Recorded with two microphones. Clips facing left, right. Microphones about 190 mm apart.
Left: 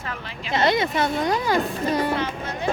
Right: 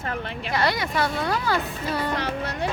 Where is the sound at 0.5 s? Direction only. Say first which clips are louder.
Left 4 dB; 20° left (ahead or behind).